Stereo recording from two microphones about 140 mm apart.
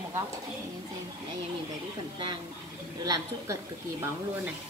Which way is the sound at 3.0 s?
25° right (ahead or behind).